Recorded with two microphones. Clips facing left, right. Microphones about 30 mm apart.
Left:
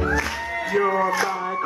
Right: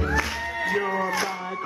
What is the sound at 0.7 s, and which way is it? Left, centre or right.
Music, centre.